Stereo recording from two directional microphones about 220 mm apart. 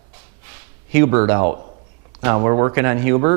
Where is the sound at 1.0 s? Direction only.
20° right (ahead or behind).